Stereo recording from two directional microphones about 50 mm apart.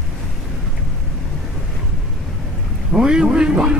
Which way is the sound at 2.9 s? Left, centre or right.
Centre.